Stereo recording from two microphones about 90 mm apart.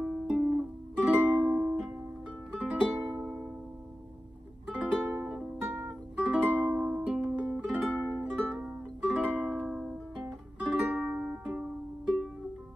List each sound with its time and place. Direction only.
0.0 s music: 10° right (ahead or behind)
4.6 s music: 15° right (ahead or behind)
5.7 s music: 30° right (ahead or behind)
6.1 s music: 10° right (ahead or behind)